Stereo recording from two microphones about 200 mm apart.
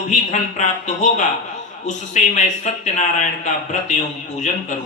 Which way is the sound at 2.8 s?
35° left (ahead or behind).